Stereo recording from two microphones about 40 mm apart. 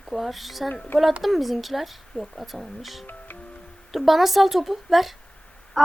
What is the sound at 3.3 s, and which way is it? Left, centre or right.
Music, left.